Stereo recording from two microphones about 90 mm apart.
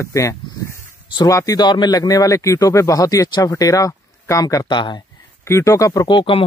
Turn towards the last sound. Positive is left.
turn(degrees=65)  # may be behind; listen again after turning